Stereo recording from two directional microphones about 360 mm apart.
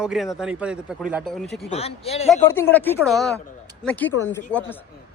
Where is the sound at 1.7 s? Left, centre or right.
Centre.